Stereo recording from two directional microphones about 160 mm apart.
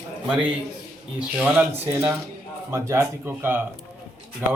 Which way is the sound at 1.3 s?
5° right (ahead or behind).